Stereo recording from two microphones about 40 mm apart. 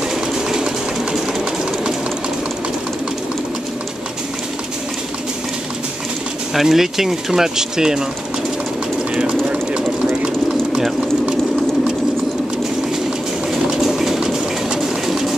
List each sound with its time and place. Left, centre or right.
0.1 s train: centre
6.5 s speech: centre
9.1 s a sound: right
13.5 s bird: centre